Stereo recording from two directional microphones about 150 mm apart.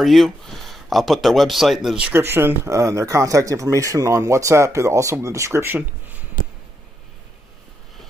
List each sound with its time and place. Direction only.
0.0 s speech: centre (ahead or behind)
2.1 s speech: 15° right (ahead or behind)